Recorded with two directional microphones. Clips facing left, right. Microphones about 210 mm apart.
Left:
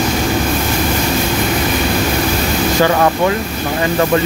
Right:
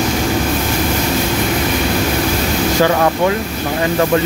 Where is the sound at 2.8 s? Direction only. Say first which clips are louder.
Left 1 dB; 10° right (ahead or behind).